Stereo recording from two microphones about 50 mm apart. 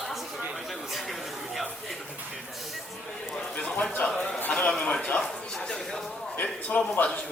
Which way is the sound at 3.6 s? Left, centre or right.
Left.